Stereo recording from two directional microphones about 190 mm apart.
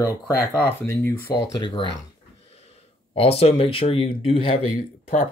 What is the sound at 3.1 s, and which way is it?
Speech, 30° left (ahead or behind).